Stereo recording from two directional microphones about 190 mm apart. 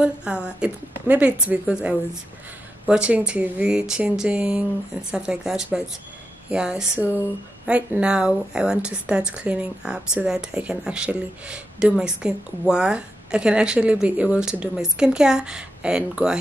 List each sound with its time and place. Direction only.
0.0 s speech: 5° right (ahead or behind)